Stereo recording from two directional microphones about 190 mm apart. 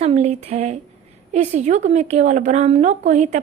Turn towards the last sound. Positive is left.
turn(degrees=-40)  # may be behind; listen again after turning